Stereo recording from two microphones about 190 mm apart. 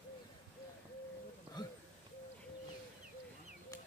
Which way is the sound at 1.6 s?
20° left (ahead or behind).